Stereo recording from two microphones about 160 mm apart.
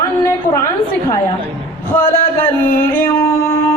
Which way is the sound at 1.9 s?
15° left (ahead or behind).